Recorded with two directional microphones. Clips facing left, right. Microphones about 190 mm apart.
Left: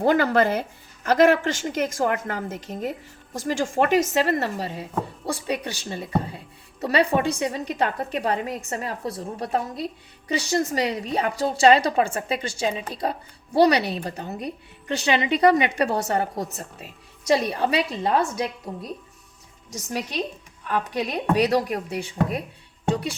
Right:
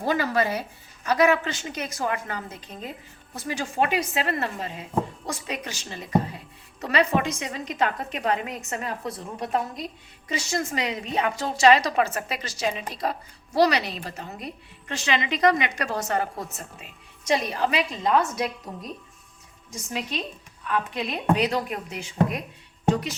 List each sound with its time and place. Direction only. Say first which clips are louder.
0.0 s speech: left 5 dB; 60° left (ahead or behind)
1.9 s a woman's voice: left 4 dB; 50° left (ahead or behind)
2.6 s speech: left 8 dB; 80° left
3.3 s speech: left 4 dB; 45° left (ahead or behind)
19.7 s speech: left 3 dB; 40° left (ahead or behind)